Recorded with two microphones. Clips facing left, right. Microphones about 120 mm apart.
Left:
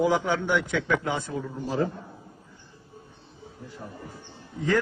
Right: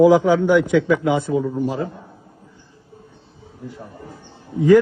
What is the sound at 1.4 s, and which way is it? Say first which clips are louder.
Speech: right 6 dB; 25° right (ahead or behind).